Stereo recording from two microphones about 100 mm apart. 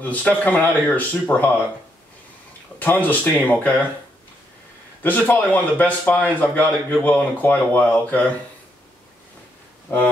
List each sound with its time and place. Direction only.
0.0 s speech: 15° left (ahead or behind)
2.8 s speech: 15° left (ahead or behind)
5.0 s speech: 20° left (ahead or behind)
9.9 s speech: 20° left (ahead or behind)